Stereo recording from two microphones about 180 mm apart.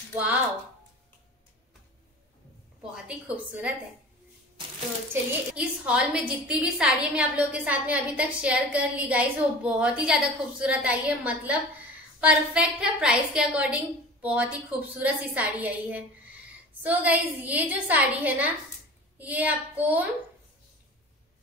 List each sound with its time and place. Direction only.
2.9 s a woman's voice: 5° right (ahead or behind)
5.1 s a woman's voice: 5° right (ahead or behind)